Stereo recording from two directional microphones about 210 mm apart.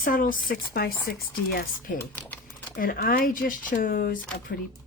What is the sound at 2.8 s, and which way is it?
A woman's voice, 45° left (ahead or behind).